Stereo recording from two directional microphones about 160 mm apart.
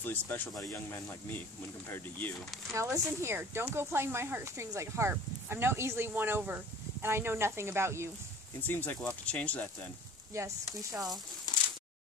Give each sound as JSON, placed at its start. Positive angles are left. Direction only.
{"t": 0.0, "sound": "speech", "side_deg": 10}
{"t": 2.7, "sound": "speech", "side_deg": -20}
{"t": 8.5, "sound": "speech", "side_deg": 10}
{"t": 10.3, "sound": "speech", "side_deg": -20}
{"t": 11.5, "sound": "a sound", "side_deg": 25}